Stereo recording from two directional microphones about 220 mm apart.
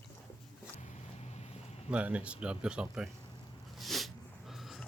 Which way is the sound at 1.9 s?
5° right (ahead or behind).